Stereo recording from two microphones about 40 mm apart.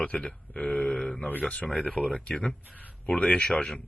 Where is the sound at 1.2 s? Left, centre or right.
Left.